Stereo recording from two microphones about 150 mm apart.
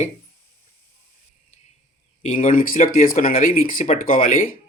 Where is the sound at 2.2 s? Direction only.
60° left (ahead or behind).